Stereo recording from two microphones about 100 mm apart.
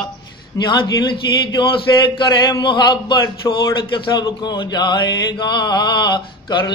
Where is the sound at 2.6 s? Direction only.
50° left (ahead or behind).